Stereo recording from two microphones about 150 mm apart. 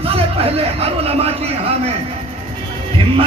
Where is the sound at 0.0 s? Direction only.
40° right (ahead or behind).